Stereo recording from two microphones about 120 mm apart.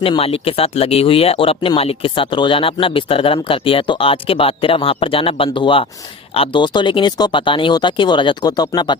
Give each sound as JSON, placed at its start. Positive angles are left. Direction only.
{"t": 0.2, "sound": "speech", "side_deg": 55}